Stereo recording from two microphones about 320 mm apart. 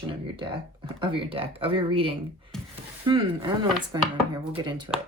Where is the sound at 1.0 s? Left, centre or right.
Centre.